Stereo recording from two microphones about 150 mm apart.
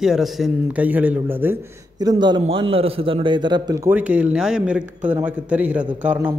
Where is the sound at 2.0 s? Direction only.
30° right (ahead or behind).